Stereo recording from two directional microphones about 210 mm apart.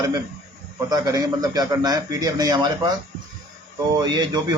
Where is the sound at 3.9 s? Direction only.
20° right (ahead or behind).